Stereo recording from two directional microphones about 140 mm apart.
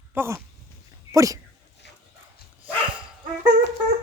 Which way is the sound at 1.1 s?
25° right (ahead or behind).